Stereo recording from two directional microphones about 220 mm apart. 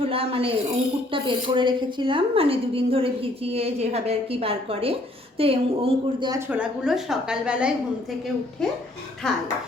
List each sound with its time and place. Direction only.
0.1 s a woman's voice: 25° right (ahead or behind)
6.5 s a woman's voice: 5° right (ahead or behind)